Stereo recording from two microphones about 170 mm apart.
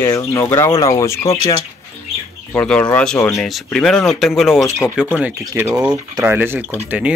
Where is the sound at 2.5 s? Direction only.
5° left (ahead or behind).